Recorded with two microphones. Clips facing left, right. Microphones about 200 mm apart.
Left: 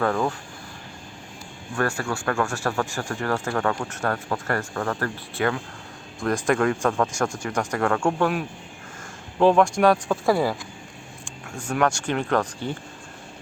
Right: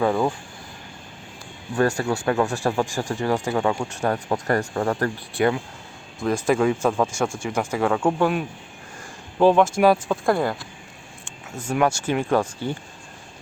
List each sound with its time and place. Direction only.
0.0 s speech: 15° right (ahead or behind)
2.0 s speech: 20° right (ahead or behind)
6.1 s speech: 5° right (ahead or behind)
11.5 s speech: 5° right (ahead or behind)